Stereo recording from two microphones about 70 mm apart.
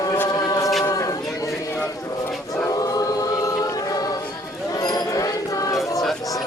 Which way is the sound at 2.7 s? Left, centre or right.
Left.